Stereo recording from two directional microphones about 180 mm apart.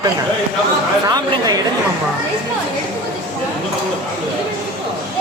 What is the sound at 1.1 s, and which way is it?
Speech, 20° right (ahead or behind).